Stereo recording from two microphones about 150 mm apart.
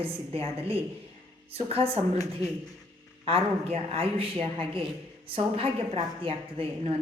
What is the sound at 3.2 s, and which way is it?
A woman's voice, 40° right (ahead or behind).